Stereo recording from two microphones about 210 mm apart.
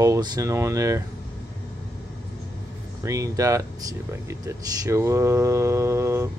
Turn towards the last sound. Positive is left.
turn(degrees=-10)  # may be behind; listen again after turning